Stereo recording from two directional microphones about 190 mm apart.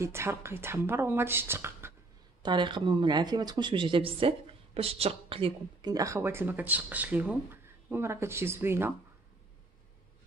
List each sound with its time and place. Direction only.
0.0 s speech: 15° right (ahead or behind)
2.4 s speech: 25° right (ahead or behind)